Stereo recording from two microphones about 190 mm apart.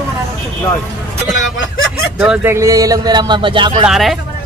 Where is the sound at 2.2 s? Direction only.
10° right (ahead or behind); by 3.8 s 25° right (ahead or behind).